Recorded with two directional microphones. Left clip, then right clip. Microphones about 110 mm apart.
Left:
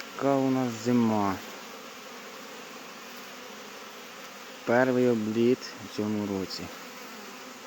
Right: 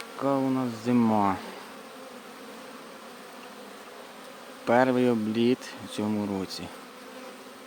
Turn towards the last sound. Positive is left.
turn(degrees=-25)  # may be behind; listen again after turning